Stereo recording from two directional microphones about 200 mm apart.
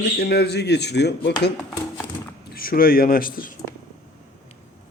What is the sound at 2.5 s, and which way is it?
Speech, 45° left (ahead or behind).